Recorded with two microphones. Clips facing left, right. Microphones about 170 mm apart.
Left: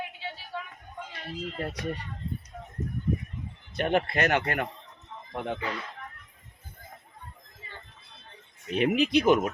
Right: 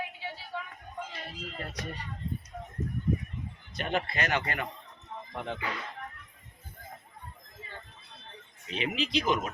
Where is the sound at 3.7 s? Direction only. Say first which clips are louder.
Left 6 dB; 55° left (ahead or behind).